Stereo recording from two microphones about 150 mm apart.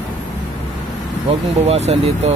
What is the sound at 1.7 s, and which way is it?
Speech, 45° right (ahead or behind).